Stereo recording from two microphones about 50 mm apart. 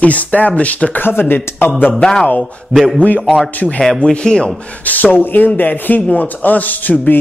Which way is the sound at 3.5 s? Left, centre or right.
Left.